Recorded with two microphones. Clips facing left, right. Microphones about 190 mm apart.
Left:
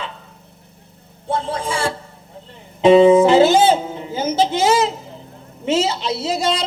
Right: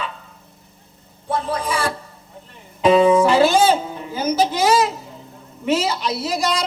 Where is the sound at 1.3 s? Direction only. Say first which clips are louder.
Even; 25° left (ahead or behind).